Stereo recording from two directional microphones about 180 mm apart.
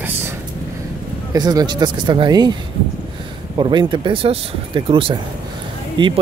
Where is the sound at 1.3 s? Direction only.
20° right (ahead or behind).